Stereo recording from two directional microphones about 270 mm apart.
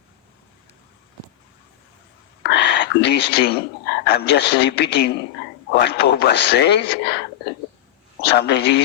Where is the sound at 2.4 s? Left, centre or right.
Left.